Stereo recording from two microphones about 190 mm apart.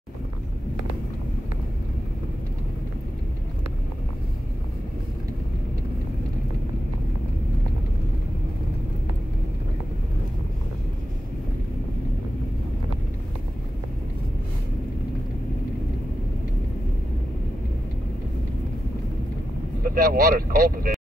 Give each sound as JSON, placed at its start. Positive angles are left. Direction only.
{"t": 19.9, "sound": "speech", "side_deg": -50}